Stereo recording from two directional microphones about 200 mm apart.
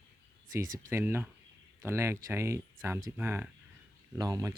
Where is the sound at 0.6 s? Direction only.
40° right (ahead or behind).